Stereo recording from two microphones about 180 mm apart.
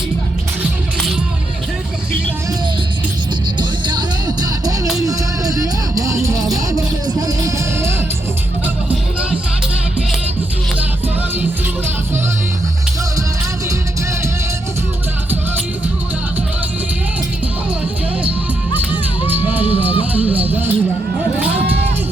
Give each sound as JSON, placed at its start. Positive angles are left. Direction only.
{"t": 3.6, "sound": "music", "side_deg": -25}
{"t": 18.9, "sound": "music", "side_deg": -10}
{"t": 20.1, "sound": "a sound", "side_deg": -10}